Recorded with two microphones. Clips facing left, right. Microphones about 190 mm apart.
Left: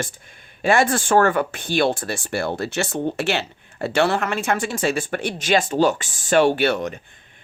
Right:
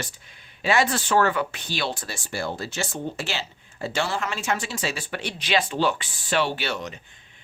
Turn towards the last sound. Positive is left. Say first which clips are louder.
# left 10 dB
turn(degrees=55)  # may be behind; listen again after turning